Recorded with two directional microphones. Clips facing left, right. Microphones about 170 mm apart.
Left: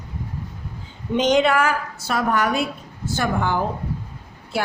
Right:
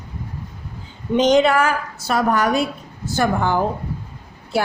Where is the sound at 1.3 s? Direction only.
40° right (ahead or behind).